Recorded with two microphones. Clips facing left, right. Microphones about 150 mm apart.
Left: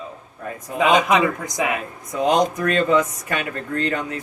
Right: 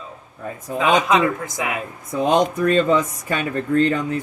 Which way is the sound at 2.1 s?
30° right (ahead or behind).